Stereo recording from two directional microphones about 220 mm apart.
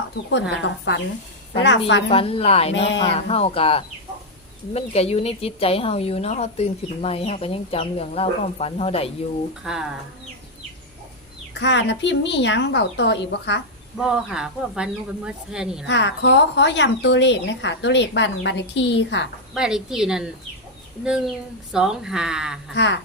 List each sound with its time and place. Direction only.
0.6 s speech: 55° left (ahead or behind)
2.0 s speech: 25° left (ahead or behind)
9.7 s speech: 5° right (ahead or behind)
11.6 s speech: 55° left (ahead or behind)
14.0 s speech: 5° right (ahead or behind)
15.9 s speech: 55° left (ahead or behind)
19.5 s speech: 5° right (ahead or behind)
22.7 s speech: 50° left (ahead or behind)